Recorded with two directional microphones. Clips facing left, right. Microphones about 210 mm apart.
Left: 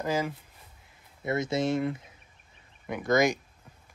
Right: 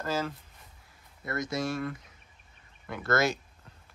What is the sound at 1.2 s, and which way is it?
Speech, 25° left (ahead or behind).